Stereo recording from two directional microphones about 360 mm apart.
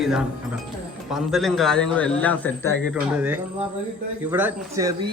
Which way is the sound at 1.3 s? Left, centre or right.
Centre.